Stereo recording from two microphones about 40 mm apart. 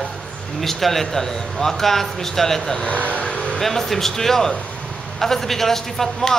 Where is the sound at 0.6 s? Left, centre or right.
Centre.